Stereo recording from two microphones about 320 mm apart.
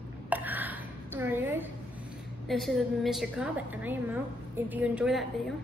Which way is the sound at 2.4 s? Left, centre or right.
Centre.